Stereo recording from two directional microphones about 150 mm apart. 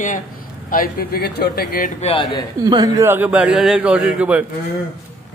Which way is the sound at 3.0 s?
10° right (ahead or behind).